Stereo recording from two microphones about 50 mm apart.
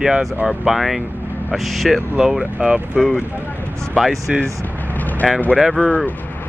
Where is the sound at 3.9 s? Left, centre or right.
Centre.